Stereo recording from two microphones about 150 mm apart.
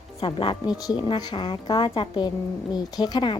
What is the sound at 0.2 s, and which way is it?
Speech, 35° left (ahead or behind).